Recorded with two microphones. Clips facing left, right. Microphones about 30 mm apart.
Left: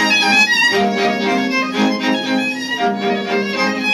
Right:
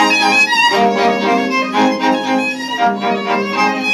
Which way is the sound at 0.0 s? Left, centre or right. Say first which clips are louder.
Right 2 dB; centre.